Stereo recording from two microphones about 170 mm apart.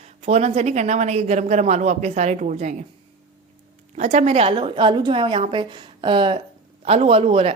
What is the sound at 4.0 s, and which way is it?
A woman's voice, 40° right (ahead or behind).